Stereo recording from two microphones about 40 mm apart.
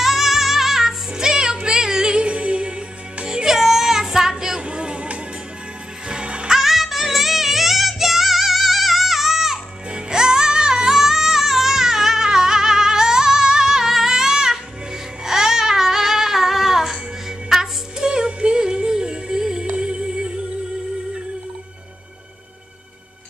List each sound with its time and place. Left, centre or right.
0.0 s music: centre; by 2.7 s right
3.3 s music: centre
4.6 s chatter: right
6.0 s music: right
6.5 s music: centre
9.8 s music: right
15.2 s child singing: centre
17.5 s music: centre